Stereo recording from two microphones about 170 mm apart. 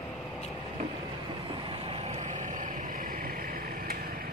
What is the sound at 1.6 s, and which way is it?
Vehicle, 35° right (ahead or behind).